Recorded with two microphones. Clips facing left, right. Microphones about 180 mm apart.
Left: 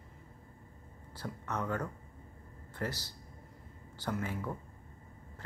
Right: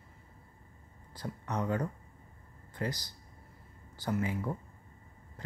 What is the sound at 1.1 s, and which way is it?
Speech, 15° right (ahead or behind).